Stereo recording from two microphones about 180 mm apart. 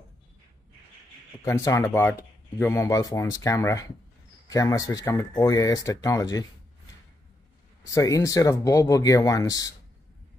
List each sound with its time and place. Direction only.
1.4 s speech: 15° left (ahead or behind)
7.8 s speech: 20° left (ahead or behind)